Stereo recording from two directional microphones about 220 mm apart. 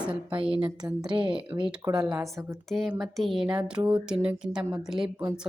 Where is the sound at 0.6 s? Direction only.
15° right (ahead or behind).